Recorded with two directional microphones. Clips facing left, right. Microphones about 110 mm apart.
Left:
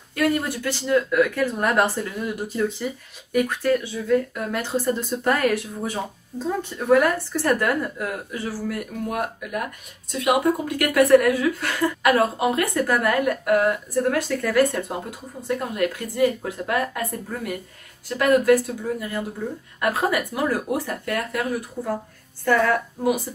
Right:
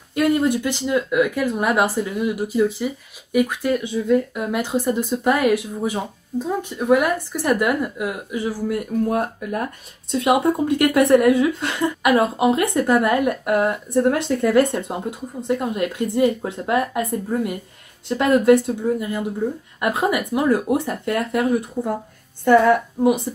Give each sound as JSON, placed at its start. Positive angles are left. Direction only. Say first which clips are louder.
{"t": 0.1, "sound": "a woman's voice", "louder": "right 5 dB", "side_deg": -20}